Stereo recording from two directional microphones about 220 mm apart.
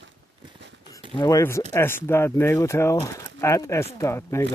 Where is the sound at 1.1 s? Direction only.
15° left (ahead or behind).